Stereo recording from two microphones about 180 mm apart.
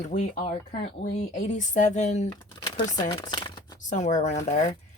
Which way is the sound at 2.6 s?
20° left (ahead or behind).